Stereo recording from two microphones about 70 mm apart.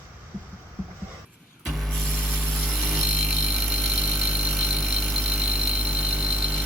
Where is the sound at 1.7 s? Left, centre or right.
Centre.